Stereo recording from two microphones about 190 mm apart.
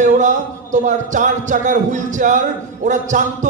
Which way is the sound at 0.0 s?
40° right (ahead or behind).